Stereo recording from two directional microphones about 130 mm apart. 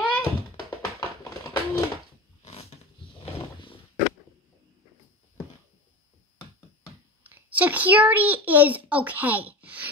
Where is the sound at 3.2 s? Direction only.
45° left (ahead or behind).